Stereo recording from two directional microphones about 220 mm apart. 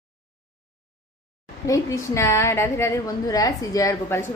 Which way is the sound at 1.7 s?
15° left (ahead or behind).